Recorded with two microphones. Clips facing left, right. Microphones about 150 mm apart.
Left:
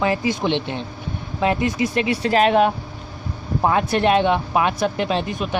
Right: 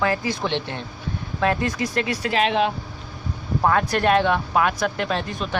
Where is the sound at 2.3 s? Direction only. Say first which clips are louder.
Left 5 dB; 45° left (ahead or behind).